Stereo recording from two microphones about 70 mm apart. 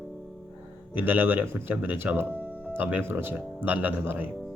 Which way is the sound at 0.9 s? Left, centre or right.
Right.